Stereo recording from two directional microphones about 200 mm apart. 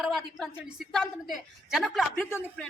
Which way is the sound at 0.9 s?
Centre (ahead or behind).